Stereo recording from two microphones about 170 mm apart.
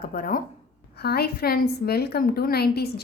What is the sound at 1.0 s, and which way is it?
A woman's voice, 70° left (ahead or behind).